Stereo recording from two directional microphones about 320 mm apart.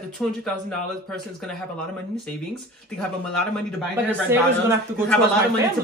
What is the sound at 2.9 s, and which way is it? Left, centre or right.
Speech, centre.